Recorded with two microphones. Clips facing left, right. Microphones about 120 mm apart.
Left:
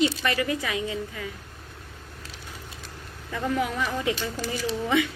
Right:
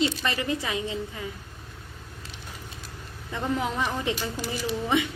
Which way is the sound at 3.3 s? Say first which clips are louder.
Left 1 dB; 25° right (ahead or behind).